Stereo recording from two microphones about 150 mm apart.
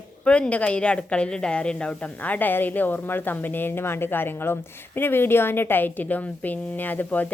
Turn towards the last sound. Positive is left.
turn(degrees=10)  # may be behind; listen again after turning